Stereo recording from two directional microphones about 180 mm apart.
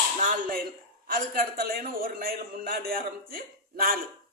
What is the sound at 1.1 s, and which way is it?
A man's voice, 55° right (ahead or behind).